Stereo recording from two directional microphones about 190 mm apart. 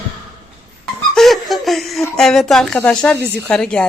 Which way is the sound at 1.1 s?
Centre (ahead or behind).